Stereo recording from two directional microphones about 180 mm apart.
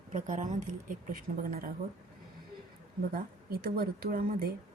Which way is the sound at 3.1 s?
55° right (ahead or behind).